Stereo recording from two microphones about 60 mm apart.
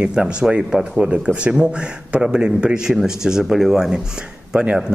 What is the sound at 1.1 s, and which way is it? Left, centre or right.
A man's voice, right.